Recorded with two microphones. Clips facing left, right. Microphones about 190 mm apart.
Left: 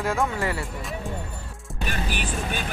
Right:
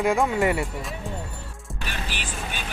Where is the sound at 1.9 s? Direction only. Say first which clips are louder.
Left 5 dB; 50° left (ahead or behind).